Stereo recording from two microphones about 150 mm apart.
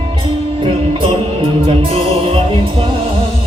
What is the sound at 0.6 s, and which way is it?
Music, 35° right (ahead or behind).